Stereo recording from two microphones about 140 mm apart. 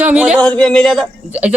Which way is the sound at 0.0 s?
10° right (ahead or behind).